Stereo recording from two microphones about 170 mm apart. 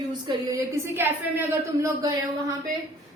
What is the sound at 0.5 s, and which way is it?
Speech, 10° right (ahead or behind).